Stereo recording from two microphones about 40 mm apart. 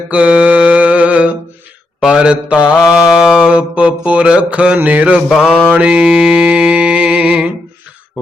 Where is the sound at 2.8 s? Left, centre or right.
Centre.